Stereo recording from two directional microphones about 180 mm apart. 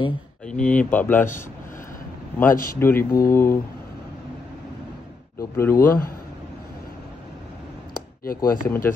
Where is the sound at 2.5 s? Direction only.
50° left (ahead or behind).